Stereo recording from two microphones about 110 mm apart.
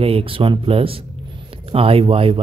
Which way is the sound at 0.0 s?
60° right (ahead or behind).